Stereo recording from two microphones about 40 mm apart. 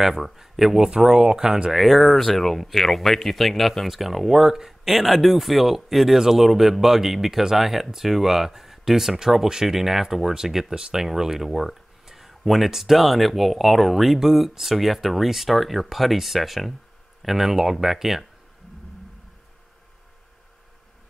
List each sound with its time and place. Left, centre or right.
0.0 s speech: centre